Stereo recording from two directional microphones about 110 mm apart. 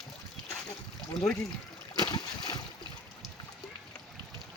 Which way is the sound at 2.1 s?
40° left (ahead or behind).